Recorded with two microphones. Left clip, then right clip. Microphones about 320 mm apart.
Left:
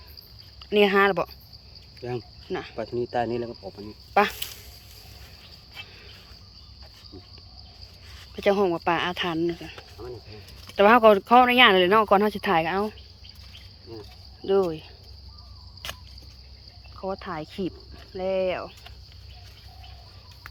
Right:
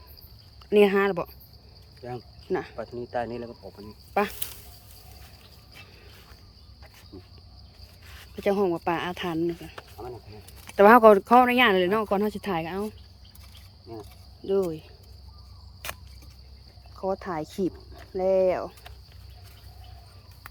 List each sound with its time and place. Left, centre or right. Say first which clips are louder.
0.6 s speech: left 1 dB; centre
2.0 s speech: left 5 dB; left
2.5 s speech: right 3 dB; centre
2.7 s speech: left 4 dB; left
4.1 s speech: left 5 dB; centre
8.4 s speech: left 3 dB; centre
14.4 s speech: left 3 dB; centre
17.0 s speech: right 2 dB; centre